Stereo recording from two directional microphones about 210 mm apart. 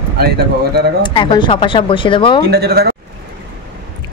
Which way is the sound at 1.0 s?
20° left (ahead or behind).